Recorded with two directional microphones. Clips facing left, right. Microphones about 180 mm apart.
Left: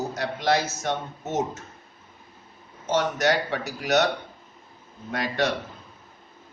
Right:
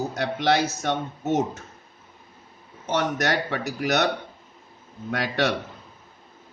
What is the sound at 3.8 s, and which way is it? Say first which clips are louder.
Speech: left 1 dB; 65° right (ahead or behind).